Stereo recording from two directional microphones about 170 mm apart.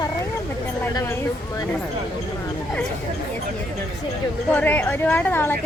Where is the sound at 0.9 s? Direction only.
15° left (ahead or behind).